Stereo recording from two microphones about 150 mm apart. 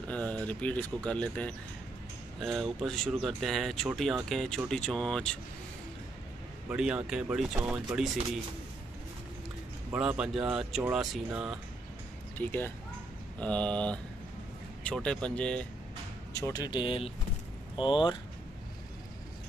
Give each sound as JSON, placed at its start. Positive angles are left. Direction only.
{"t": 0.1, "sound": "speech", "side_deg": 10}
{"t": 6.7, "sound": "speech", "side_deg": -5}
{"t": 9.9, "sound": "speech", "side_deg": -5}
{"t": 12.4, "sound": "speech", "side_deg": 15}
{"t": 16.3, "sound": "speech", "side_deg": 20}